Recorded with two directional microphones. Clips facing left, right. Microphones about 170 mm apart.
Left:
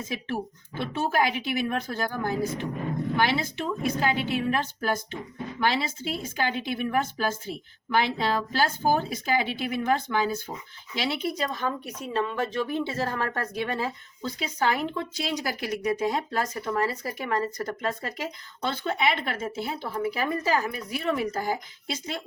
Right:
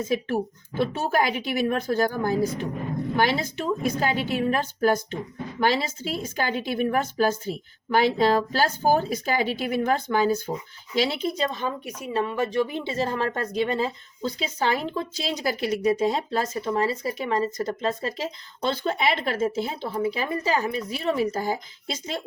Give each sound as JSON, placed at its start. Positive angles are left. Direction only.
{"t": 0.8, "sound": "a woman's voice", "side_deg": -45}
{"t": 11.3, "sound": "speech", "side_deg": -25}
{"t": 11.9, "sound": "speech", "side_deg": -10}